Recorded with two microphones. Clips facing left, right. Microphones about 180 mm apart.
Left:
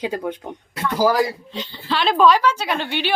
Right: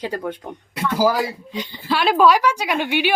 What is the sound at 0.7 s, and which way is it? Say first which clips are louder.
A woman's voice: left 1 dB; 10° right (ahead or behind).